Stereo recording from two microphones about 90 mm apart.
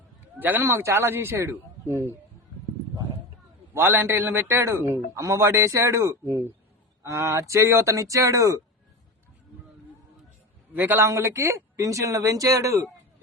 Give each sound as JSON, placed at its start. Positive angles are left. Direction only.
{"t": 0.3, "sound": "a man's voice", "side_deg": -20}
{"t": 3.8, "sound": "a man's voice", "side_deg": -25}
{"t": 10.8, "sound": "a man's voice", "side_deg": -20}
{"t": 11.1, "sound": "speech", "side_deg": -35}